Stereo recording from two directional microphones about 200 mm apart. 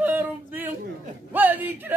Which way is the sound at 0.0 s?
10° right (ahead or behind).